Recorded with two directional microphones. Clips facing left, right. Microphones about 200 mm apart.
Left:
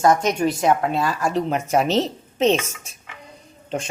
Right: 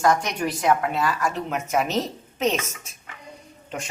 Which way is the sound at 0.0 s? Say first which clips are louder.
Left 4 dB; 20° left (ahead or behind).